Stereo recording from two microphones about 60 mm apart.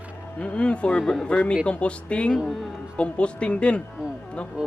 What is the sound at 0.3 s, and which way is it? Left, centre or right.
Speech, centre.